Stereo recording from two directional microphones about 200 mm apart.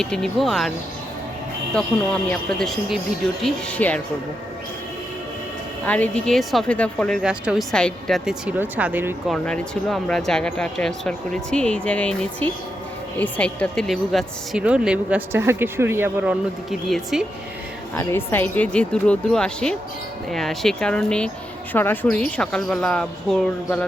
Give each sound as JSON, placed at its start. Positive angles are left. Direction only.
{"t": 0.0, "sound": "speech", "side_deg": 5}
{"t": 2.3, "sound": "speech", "side_deg": 0}
{"t": 5.8, "sound": "speech", "side_deg": 5}
{"t": 9.3, "sound": "a woman's voice", "side_deg": 0}
{"t": 17.9, "sound": "speech", "side_deg": 10}